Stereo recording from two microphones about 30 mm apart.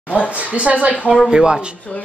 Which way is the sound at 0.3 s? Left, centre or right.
Right.